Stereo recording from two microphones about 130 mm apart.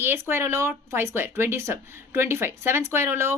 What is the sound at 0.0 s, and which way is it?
A woman's voice, 20° right (ahead or behind).